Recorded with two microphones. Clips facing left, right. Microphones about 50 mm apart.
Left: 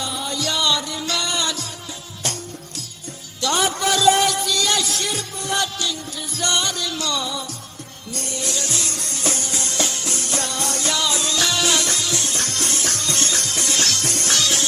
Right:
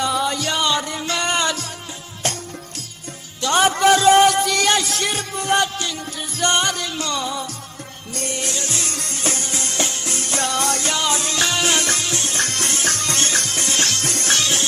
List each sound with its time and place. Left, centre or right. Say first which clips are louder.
0.0 s music: right 8 dB; right
0.3 s music: right 2 dB; right
3.4 s music: right 5 dB; right